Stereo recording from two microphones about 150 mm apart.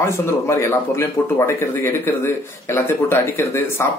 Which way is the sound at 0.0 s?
15° left (ahead or behind).